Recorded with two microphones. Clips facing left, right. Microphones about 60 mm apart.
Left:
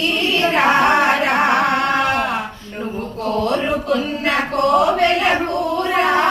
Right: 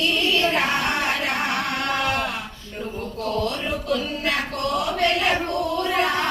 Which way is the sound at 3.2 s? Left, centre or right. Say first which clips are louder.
Left 7 dB; left.